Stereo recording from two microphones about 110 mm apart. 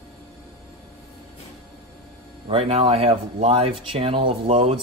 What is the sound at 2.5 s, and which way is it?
Speech, 60° right (ahead or behind).